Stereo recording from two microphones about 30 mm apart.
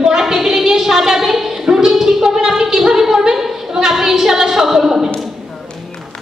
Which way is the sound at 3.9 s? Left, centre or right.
Centre.